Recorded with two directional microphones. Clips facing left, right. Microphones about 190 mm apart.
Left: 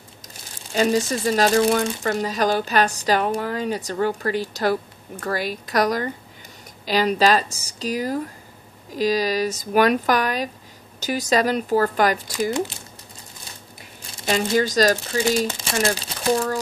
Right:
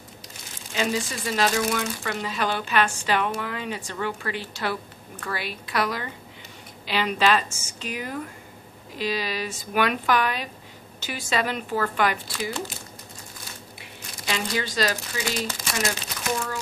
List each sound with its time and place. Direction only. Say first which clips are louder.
0.7 s speech: left 7 dB; 40° left (ahead or behind)
13.7 s a sound: even; 40° left (ahead or behind)
14.5 s speech: left 9 dB; 45° left (ahead or behind)
15.4 s speech: left 6 dB; 30° left (ahead or behind)